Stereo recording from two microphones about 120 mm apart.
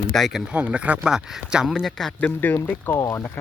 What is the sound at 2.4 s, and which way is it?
Speech, 15° left (ahead or behind).